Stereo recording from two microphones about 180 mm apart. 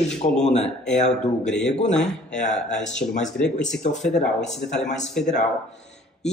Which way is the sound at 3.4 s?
5° left (ahead or behind).